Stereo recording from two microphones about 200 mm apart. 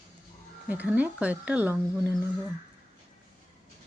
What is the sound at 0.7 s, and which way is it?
Speech, 5° right (ahead or behind).